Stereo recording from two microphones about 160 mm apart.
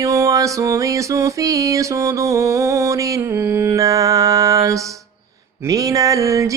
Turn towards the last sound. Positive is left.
turn(degrees=-20)  # may be behind; listen again after turning